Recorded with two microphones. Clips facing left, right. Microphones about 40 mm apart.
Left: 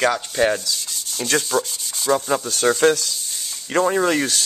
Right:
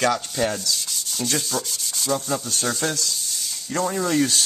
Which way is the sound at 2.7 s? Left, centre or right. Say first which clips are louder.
Left 11 dB; left.